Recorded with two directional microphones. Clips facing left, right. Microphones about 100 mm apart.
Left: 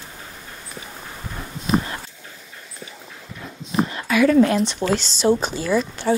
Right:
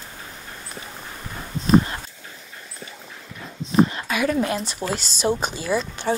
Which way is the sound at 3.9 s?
20° right (ahead or behind).